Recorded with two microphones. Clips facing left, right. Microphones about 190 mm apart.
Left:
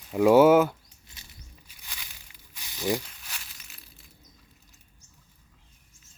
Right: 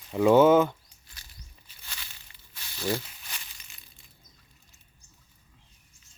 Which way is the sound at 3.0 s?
Centre (ahead or behind).